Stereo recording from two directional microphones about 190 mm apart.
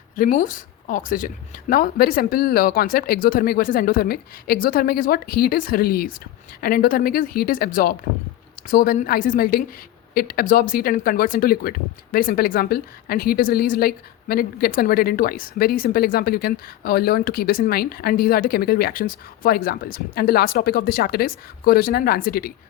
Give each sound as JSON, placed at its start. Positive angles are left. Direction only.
{"t": 0.2, "sound": "a woman's voice", "side_deg": 45}